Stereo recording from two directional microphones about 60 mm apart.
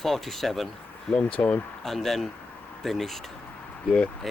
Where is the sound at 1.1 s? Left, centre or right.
Centre.